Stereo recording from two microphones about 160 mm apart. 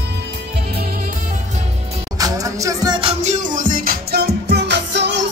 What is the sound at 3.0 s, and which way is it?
Music, 40° right (ahead or behind).